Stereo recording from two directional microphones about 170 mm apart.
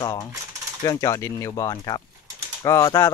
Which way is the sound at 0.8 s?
15° left (ahead or behind).